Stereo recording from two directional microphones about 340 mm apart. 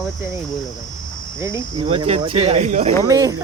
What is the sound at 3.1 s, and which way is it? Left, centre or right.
Speech, centre.